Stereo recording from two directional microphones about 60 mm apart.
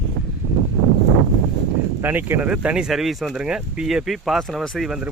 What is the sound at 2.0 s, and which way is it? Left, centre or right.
Speech, right.